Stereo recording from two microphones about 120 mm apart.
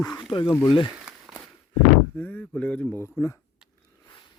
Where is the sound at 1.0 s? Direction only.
5° right (ahead or behind).